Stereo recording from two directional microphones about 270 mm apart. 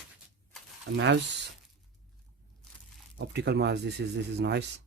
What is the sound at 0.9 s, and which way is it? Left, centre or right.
Speech, right.